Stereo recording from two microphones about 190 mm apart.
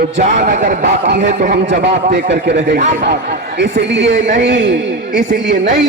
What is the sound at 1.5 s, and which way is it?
A man's voice, 60° right (ahead or behind).